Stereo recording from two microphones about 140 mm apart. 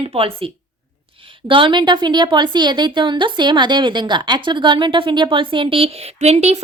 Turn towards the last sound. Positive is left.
turn(degrees=-50)  # may be behind; listen again after turning